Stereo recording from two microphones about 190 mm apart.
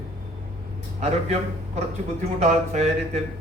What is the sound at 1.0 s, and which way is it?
A man's voice, 35° right (ahead or behind).